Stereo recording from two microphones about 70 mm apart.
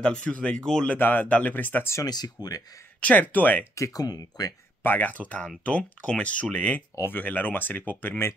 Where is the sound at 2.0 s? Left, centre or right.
Left.